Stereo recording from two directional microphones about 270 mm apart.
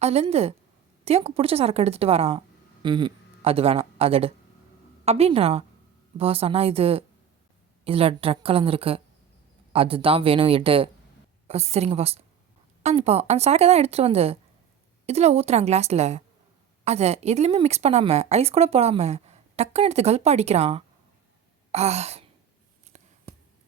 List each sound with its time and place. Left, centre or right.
0.0 s speech: right
21.7 s sigh: right
22.9 s a sound: right